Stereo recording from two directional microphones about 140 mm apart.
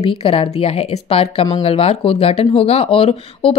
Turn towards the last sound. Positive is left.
turn(degrees=45)  # may be behind; listen again after turning